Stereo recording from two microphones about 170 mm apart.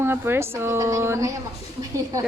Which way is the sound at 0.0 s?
15° right (ahead or behind).